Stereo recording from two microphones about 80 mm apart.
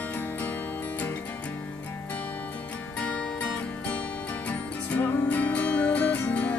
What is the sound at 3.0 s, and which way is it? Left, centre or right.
Music, centre.